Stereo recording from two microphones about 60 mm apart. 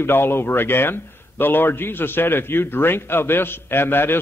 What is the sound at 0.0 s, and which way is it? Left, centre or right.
A man's voice, left.